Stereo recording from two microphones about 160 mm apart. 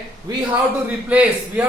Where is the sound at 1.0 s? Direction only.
10° right (ahead or behind).